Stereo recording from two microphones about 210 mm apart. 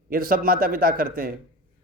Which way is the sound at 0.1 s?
45° right (ahead or behind).